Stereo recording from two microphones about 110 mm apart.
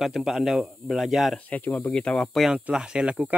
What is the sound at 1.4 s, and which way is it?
Speech, 15° left (ahead or behind).